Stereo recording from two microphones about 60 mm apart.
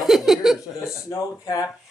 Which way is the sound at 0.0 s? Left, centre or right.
Centre.